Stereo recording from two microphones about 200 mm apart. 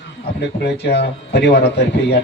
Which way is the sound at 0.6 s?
55° left (ahead or behind).